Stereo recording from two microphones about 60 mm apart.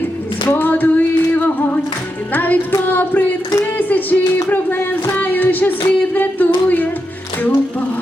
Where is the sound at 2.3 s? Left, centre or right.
Left.